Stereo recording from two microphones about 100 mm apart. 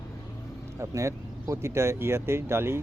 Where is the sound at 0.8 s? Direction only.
30° right (ahead or behind).